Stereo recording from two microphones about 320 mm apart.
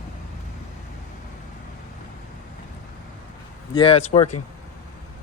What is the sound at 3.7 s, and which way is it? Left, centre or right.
Speech, centre.